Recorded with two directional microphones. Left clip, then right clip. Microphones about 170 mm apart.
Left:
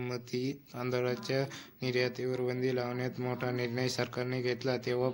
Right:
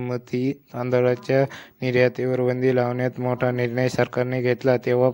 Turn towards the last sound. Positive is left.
turn(degrees=-45)  # may be behind; listen again after turning